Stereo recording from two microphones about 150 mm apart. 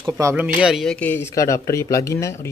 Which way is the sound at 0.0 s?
20° right (ahead or behind).